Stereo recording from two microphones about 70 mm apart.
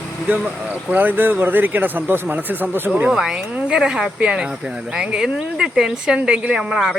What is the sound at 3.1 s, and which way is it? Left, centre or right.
Speech, centre.